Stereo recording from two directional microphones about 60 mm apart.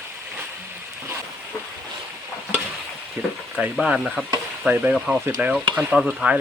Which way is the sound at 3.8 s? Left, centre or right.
Centre.